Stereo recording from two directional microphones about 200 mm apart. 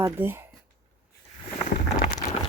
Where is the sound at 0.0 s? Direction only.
10° right (ahead or behind).